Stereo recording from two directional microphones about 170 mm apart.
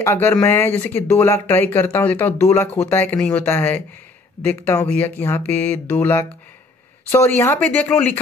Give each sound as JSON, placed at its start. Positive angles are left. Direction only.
{"t": 0.0, "sound": "speech", "side_deg": 15}